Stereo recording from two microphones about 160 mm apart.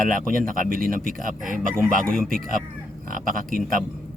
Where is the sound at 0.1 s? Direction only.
60° right (ahead or behind).